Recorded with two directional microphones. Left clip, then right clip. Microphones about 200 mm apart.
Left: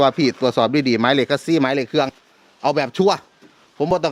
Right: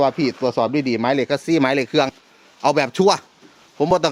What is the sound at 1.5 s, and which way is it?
A man's voice, 10° left (ahead or behind).